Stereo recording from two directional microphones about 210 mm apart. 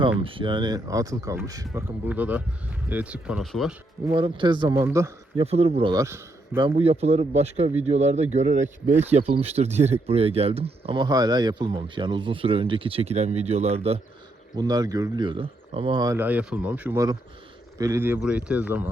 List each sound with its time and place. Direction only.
0.0 s speech: 25° right (ahead or behind); by 3.8 s centre (ahead or behind)
4.1 s speech: 25° right (ahead or behind)
5.4 s speech: 30° right (ahead or behind); by 6.6 s 10° right (ahead or behind)
6.6 s speech: 25° right (ahead or behind)
14.5 s speech: 20° right (ahead or behind)